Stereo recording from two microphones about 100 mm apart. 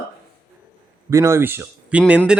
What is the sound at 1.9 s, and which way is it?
Speech, 10° right (ahead or behind).